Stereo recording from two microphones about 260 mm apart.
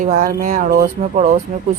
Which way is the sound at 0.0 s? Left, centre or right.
Right.